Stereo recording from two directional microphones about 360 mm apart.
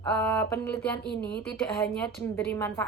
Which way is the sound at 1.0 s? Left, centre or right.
Left.